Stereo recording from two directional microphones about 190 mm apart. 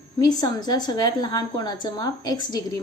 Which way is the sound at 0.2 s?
20° left (ahead or behind).